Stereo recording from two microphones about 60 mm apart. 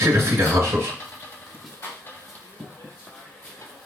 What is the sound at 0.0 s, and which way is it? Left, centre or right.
Speech, right.